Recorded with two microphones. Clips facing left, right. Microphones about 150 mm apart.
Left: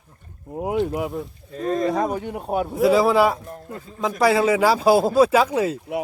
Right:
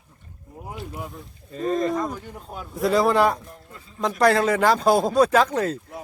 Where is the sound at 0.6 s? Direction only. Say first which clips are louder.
Left 12 dB; 75° left (ahead or behind).